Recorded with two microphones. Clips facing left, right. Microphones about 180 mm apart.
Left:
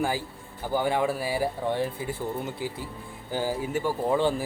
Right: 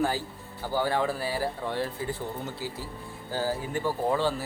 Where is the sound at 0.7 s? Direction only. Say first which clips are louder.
Left 2 dB; 15° left (ahead or behind).